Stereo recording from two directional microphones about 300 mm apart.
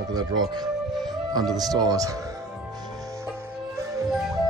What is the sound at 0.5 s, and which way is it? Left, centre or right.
Music, centre.